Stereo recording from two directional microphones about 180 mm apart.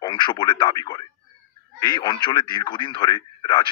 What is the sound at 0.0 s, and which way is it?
Speech, 25° left (ahead or behind).